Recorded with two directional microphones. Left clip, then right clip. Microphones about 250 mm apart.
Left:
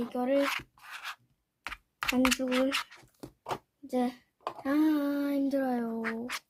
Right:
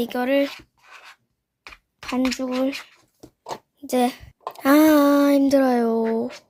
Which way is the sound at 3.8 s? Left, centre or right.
Right.